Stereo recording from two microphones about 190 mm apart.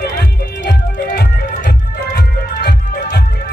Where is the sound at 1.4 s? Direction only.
40° left (ahead or behind).